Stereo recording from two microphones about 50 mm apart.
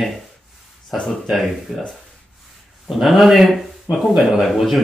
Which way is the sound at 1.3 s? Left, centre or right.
Centre.